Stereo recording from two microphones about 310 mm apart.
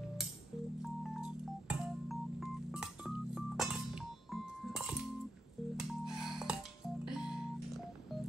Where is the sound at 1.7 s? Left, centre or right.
Centre.